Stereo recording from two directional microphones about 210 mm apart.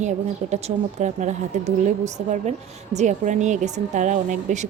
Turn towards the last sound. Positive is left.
turn(degrees=-35)  # may be behind; listen again after turning